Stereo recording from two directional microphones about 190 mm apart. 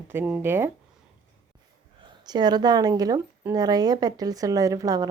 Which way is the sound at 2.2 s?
20° right (ahead or behind).